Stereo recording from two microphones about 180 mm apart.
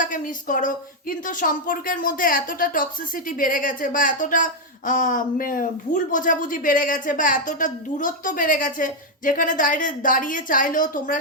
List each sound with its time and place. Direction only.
0.0 s a woman's voice: 50° left (ahead or behind)